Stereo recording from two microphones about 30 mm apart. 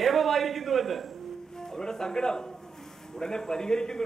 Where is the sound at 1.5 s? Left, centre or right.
Left.